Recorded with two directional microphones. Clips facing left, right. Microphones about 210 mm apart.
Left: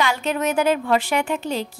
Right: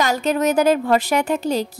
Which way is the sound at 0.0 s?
40° right (ahead or behind).